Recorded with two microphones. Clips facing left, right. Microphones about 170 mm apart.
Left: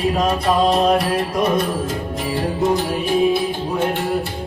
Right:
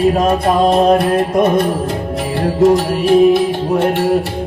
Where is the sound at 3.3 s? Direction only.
75° right (ahead or behind).